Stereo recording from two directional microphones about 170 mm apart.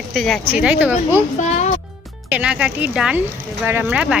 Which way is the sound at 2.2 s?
5° right (ahead or behind).